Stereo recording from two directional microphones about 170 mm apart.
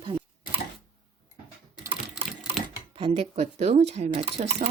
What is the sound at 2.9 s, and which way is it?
Speech, 30° right (ahead or behind).